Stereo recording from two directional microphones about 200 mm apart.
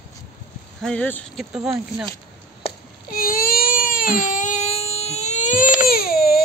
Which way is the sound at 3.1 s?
45° left (ahead or behind).